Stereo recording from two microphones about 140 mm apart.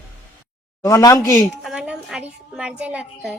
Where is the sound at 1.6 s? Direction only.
5° right (ahead or behind).